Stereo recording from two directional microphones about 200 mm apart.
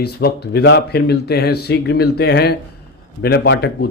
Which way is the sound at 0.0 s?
50° left (ahead or behind).